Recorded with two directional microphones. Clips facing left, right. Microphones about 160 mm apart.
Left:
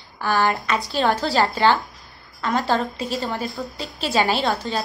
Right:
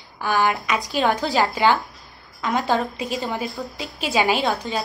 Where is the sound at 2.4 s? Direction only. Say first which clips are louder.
Even; 15° right (ahead or behind).